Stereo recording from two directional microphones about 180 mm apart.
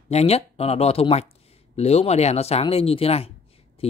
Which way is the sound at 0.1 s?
35° left (ahead or behind).